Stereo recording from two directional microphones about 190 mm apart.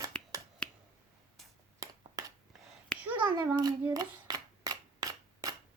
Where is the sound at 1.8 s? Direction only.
20° right (ahead or behind).